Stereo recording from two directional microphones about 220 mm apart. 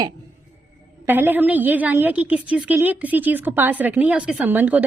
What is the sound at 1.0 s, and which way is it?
A woman's voice, 10° right (ahead or behind).